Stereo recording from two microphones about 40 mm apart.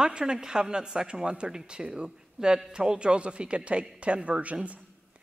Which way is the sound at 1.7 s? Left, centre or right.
Right.